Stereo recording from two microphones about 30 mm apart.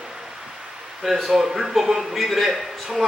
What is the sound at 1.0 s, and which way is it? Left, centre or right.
A man's voice, centre.